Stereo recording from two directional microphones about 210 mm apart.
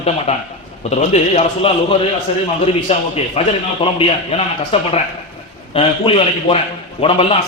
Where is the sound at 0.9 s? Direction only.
30° left (ahead or behind).